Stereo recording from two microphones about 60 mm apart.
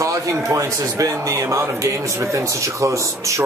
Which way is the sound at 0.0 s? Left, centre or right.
Right.